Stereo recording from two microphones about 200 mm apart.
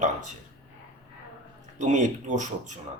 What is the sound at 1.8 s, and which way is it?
Speech, 40° right (ahead or behind).